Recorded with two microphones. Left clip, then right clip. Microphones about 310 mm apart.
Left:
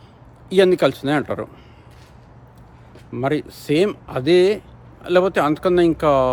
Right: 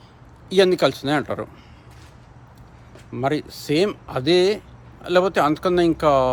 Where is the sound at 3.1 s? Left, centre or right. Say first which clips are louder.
Left 1 dB; centre.